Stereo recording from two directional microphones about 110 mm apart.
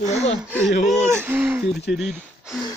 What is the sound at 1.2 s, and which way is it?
Speech, 15° right (ahead or behind).